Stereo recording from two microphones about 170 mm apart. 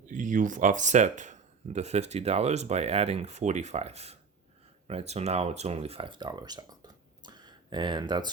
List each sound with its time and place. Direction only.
0.1 s speech: 50° right (ahead or behind); by 8.3 s 25° right (ahead or behind)